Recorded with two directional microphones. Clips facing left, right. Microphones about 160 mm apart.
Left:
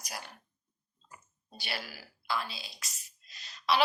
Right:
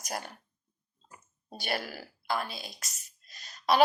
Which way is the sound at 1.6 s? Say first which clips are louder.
Right 7 dB; 50° right (ahead or behind).